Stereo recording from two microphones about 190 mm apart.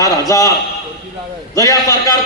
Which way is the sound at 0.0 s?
15° left (ahead or behind).